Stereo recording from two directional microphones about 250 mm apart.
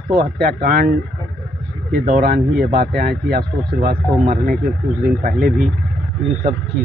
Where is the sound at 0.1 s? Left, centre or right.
Right.